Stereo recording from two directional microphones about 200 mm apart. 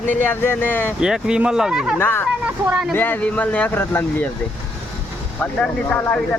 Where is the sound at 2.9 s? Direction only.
10° left (ahead or behind).